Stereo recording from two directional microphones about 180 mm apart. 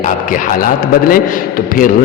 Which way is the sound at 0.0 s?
45° left (ahead or behind).